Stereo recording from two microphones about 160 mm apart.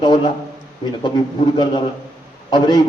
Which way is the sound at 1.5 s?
30° left (ahead or behind).